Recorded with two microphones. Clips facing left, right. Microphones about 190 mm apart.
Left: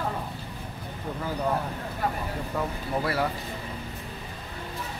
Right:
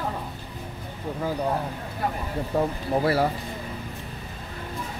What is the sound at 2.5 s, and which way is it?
Speech, 35° right (ahead or behind).